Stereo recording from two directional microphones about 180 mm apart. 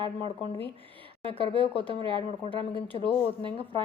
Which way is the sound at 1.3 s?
30° left (ahead or behind).